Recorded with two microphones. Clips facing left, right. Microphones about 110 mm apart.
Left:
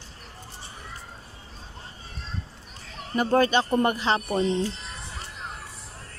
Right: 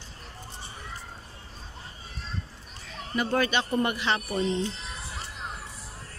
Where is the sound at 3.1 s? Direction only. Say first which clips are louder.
Left 5 dB; 40° left (ahead or behind).